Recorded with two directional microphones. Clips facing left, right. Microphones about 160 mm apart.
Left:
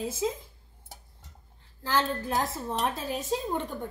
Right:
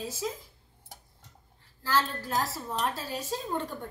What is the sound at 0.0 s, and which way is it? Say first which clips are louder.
Speech: left 5 dB; 20° left (ahead or behind).